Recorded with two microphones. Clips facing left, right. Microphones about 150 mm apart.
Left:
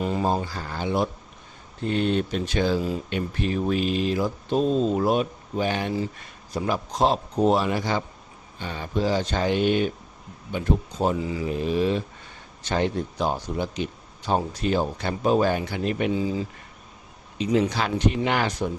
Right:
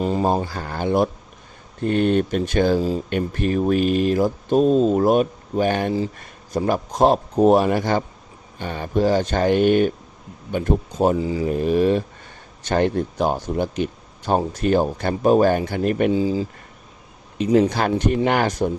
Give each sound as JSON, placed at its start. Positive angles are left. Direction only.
{"t": 0.0, "sound": "a sound", "side_deg": -35}
{"t": 0.5, "sound": "speech", "side_deg": -50}
{"t": 11.2, "sound": "speech", "side_deg": -30}
{"t": 11.4, "sound": "speech", "side_deg": -50}
{"t": 16.1, "sound": "speech", "side_deg": -30}
{"t": 17.3, "sound": "speech", "side_deg": -50}